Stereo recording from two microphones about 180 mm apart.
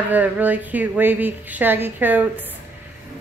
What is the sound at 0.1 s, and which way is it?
Speech, 10° right (ahead or behind).